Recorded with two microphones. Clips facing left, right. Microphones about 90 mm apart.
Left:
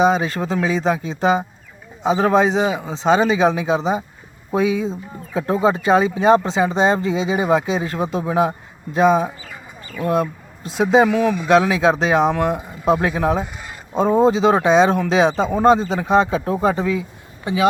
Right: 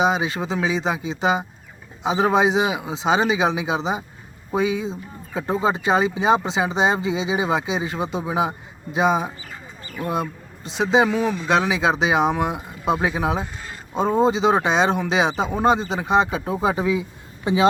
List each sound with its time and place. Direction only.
0.0 s speech: 5° right (ahead or behind)
11.1 s speech: 15° right (ahead or behind)
11.4 s speech: centre (ahead or behind)
13.4 s a sound: 15° left (ahead or behind)
13.9 s speech: centre (ahead or behind); by 17.7 s 25° right (ahead or behind)